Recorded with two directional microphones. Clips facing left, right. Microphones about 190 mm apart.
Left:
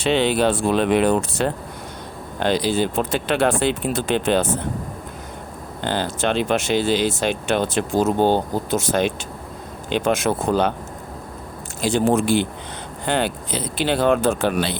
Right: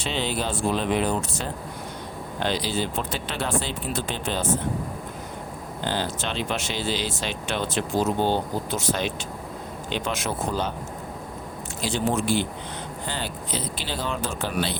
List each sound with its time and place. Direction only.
0.0 s speech: 65° left (ahead or behind)
2.4 s speech: 50° left (ahead or behind)
5.8 s speech: 55° left (ahead or behind)
11.8 s speech: 50° left (ahead or behind)